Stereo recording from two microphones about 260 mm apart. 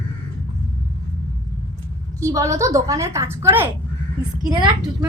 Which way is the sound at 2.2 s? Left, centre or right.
Centre.